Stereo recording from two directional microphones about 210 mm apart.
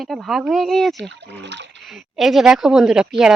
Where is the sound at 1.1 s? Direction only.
55° right (ahead or behind).